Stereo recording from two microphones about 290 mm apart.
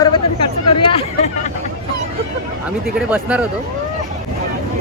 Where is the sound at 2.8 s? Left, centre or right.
Centre.